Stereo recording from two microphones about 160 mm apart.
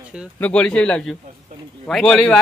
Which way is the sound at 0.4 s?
5° left (ahead or behind).